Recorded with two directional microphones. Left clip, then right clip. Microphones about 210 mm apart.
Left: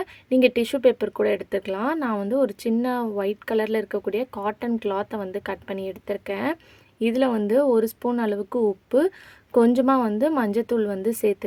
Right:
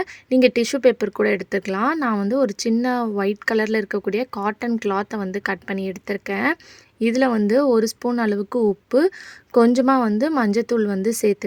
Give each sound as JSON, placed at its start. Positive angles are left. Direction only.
{"t": 0.0, "sound": "speech", "side_deg": -40}